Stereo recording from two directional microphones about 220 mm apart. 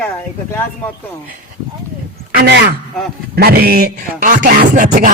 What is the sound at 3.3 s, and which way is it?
Music, 45° right (ahead or behind).